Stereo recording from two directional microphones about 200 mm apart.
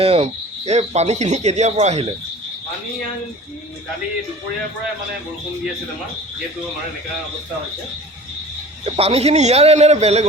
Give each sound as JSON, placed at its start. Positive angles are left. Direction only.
{"t": 0.0, "sound": "speech", "side_deg": -30}
{"t": 8.8, "sound": "speech", "side_deg": -30}